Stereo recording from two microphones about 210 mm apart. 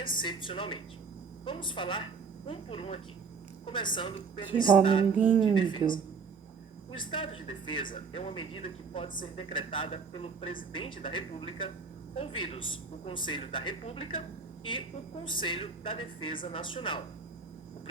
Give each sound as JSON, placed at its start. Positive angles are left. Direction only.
{"t": 0.0, "sound": "speech", "side_deg": 20}
{"t": 5.1, "sound": "a sound", "side_deg": -5}
{"t": 5.6, "sound": "speech", "side_deg": 25}
{"t": 7.1, "sound": "speech", "side_deg": 25}